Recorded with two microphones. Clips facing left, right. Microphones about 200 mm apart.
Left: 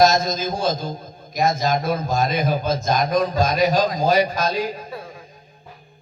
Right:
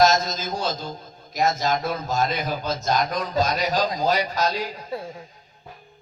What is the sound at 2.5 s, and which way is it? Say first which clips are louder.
Speech: left 5 dB; 15° left (ahead or behind).